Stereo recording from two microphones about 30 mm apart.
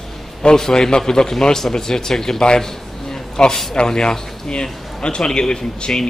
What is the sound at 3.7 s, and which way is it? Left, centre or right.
A man's voice, left.